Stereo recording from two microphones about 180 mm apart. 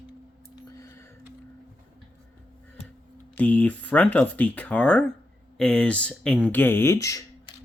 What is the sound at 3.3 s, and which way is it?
Speech, 10° left (ahead or behind).